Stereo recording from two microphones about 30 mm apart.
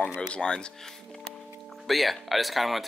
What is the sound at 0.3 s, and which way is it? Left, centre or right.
Speech, left.